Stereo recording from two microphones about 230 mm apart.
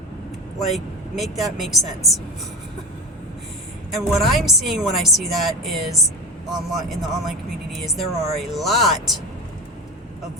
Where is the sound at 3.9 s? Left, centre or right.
Centre.